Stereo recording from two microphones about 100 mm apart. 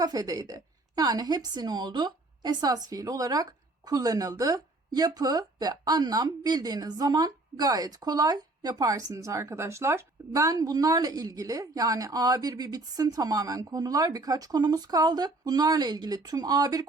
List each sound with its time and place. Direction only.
0.0 s a woman's voice: 40° right (ahead or behind)